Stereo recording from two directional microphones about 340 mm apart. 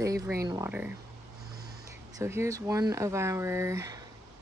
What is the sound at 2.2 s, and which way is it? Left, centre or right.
Speech, centre.